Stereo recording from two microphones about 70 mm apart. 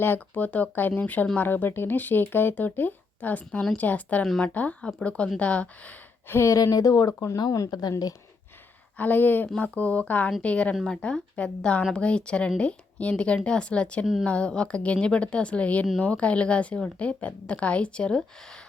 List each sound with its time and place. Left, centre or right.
0.0 s a woman's voice: left
6.3 s speech: left
6.6 s speech: left
9.0 s a woman's voice: left